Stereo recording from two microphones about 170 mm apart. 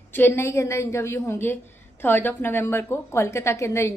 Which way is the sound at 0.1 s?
15° left (ahead or behind).